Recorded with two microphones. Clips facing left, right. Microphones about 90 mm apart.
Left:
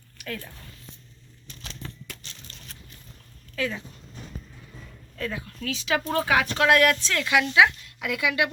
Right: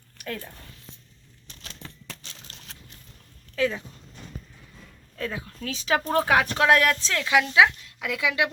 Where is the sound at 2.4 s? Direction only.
90° right.